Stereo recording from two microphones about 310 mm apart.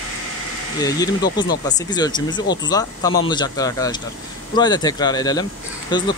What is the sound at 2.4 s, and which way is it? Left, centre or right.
Speech, left.